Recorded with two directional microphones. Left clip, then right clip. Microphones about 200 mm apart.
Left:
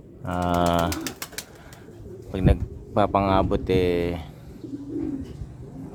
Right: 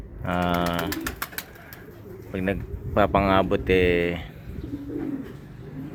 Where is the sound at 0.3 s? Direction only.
10° left (ahead or behind).